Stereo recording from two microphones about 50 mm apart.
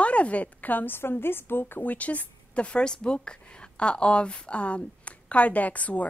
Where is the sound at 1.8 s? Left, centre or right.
Left.